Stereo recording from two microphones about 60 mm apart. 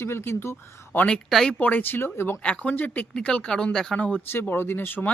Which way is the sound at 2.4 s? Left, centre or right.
Centre.